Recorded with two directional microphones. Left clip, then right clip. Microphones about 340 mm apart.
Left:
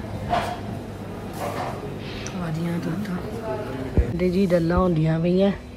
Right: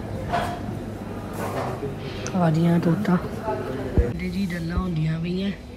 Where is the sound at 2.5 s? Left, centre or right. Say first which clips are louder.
Right 6 dB; centre.